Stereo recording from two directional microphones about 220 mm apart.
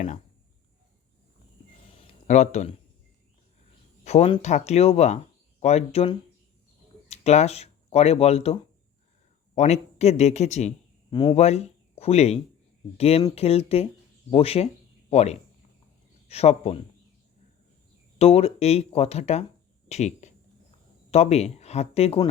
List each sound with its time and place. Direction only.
2.2 s speech: 30° left (ahead or behind)
4.0 s speech: 30° left (ahead or behind)
9.6 s speech: 30° left (ahead or behind)
18.2 s speech: 25° left (ahead or behind)